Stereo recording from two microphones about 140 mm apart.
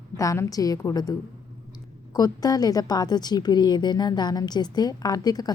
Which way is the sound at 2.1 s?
25° left (ahead or behind).